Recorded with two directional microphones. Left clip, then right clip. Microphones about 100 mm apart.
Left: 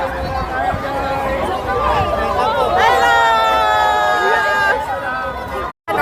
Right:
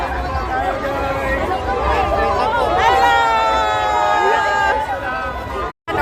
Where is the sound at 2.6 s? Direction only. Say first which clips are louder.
Left 1 dB; 20° left (ahead or behind).